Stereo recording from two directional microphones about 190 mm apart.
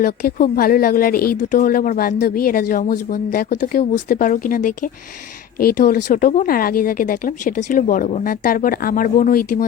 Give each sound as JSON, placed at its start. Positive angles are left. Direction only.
{"t": 0.0, "sound": "speech", "side_deg": 50}